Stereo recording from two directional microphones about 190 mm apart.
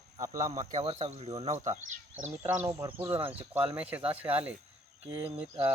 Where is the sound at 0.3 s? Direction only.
40° right (ahead or behind).